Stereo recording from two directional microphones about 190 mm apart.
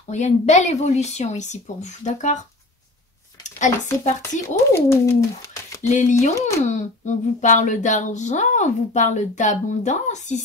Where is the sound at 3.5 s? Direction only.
40° left (ahead or behind).